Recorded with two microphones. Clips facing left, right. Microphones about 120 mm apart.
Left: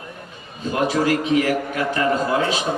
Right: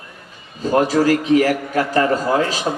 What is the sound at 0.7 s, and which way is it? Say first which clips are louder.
A man's voice: right 4 dB; 40° right (ahead or behind).